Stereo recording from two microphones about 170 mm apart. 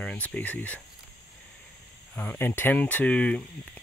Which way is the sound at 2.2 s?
10° left (ahead or behind).